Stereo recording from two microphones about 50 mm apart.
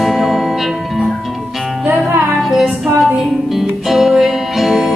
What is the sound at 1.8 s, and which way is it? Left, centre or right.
Music, right.